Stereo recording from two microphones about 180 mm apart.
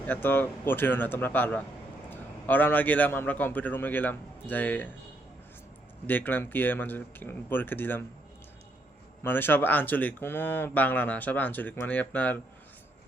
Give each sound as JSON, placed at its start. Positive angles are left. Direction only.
{"t": 0.1, "sound": "speech", "side_deg": 10}
{"t": 6.1, "sound": "speech", "side_deg": 10}
{"t": 9.2, "sound": "speech", "side_deg": 10}